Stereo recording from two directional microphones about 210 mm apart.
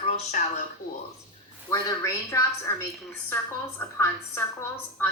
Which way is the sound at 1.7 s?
15° left (ahead or behind).